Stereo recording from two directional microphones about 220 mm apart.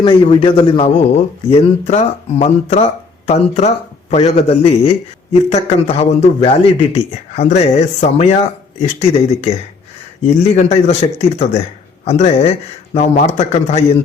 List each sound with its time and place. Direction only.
0.0 s a man's voice: 25° left (ahead or behind)